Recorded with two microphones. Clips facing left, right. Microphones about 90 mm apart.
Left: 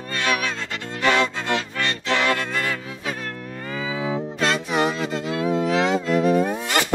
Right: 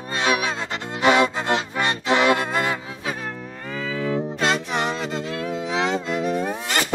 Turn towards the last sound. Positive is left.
turn(degrees=0)  # may be behind; listen again after turning